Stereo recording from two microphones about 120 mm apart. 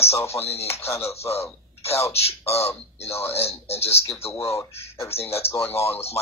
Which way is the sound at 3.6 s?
60° left (ahead or behind).